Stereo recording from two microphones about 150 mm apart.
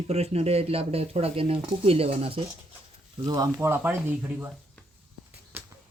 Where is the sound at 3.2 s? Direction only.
25° right (ahead or behind).